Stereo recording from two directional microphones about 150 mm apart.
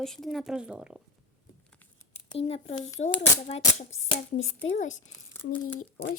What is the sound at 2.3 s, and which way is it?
Speech, 40° left (ahead or behind).